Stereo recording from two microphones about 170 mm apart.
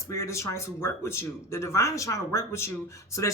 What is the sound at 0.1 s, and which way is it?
Speech, 15° left (ahead or behind).